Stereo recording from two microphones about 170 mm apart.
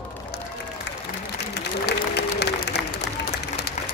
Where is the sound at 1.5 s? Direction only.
75° left (ahead or behind).